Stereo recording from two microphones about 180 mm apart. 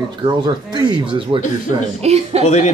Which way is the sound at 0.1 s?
25° right (ahead or behind).